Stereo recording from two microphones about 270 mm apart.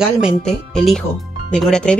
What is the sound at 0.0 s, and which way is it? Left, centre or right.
Speech, centre.